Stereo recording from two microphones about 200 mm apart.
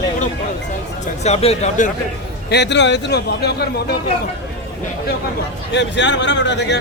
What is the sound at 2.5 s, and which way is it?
Speech, 60° left (ahead or behind).